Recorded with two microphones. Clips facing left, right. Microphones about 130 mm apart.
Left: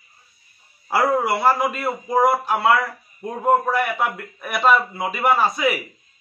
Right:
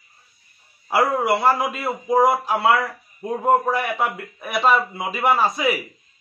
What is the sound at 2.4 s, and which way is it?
A man's voice, centre (ahead or behind).